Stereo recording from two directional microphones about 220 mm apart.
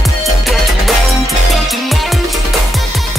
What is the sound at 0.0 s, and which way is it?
Music, centre (ahead or behind).